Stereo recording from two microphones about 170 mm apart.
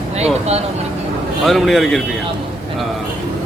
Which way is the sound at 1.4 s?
Centre (ahead or behind).